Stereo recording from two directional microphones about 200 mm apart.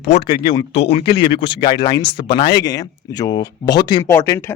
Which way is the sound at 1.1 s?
25° left (ahead or behind).